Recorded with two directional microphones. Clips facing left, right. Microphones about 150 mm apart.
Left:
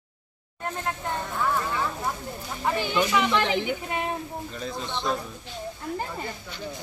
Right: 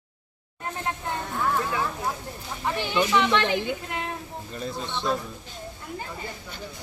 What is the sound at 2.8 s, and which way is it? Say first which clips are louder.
Speech: right 2 dB; 10° left (ahead or behind).